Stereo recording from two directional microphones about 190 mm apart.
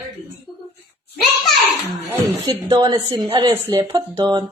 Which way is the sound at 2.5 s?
20° right (ahead or behind).